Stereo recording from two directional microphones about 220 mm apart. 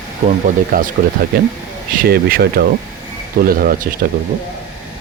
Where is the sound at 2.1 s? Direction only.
45° right (ahead or behind).